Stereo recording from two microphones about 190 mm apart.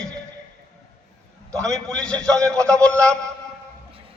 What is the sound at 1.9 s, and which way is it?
A man's voice, 5° left (ahead or behind).